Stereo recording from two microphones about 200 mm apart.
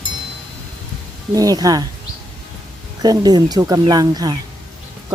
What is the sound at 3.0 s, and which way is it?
Speech, 20° right (ahead or behind).